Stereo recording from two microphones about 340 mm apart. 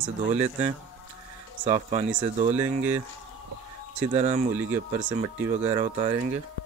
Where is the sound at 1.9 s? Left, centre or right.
Centre.